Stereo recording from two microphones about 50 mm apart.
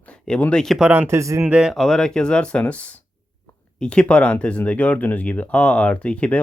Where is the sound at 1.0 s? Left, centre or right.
Right.